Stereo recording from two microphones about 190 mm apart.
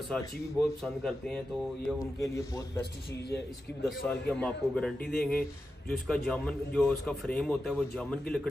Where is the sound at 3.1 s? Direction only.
60° left (ahead or behind).